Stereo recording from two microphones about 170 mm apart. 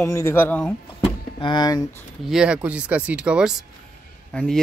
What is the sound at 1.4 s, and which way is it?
Speech, 25° left (ahead or behind).